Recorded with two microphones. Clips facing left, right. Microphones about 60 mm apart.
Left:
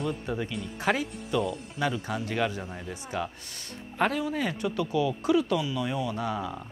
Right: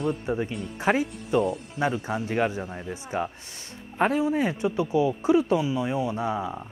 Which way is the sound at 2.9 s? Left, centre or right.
Right.